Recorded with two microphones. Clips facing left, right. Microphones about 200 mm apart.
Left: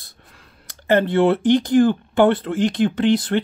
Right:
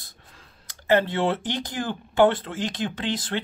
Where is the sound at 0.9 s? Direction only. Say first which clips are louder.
Left 5 dB; 55° left (ahead or behind).